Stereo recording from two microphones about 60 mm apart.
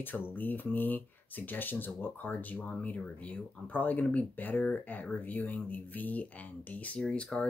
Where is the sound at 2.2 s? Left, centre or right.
Left.